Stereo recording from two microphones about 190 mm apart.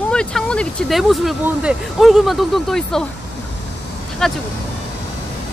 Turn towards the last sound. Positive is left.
turn(degrees=0)  # may be behind; listen again after turning